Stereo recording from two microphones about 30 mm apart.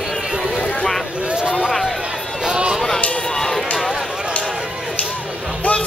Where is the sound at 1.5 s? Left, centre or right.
Centre.